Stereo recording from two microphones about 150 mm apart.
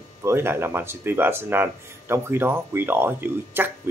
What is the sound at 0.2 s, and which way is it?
Speech, 15° right (ahead or behind).